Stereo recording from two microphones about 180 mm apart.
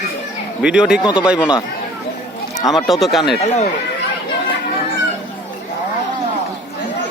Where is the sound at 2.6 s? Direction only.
Centre (ahead or behind).